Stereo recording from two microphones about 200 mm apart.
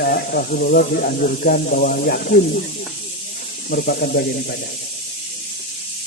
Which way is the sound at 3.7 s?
50° left (ahead or behind).